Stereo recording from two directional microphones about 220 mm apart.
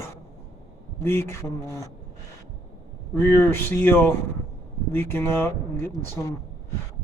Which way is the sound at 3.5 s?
10° left (ahead or behind).